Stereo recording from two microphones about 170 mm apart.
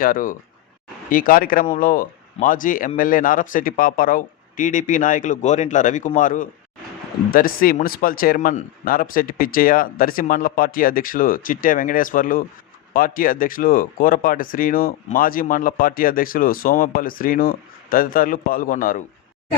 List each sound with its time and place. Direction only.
0.0 s speech: 55° left (ahead or behind)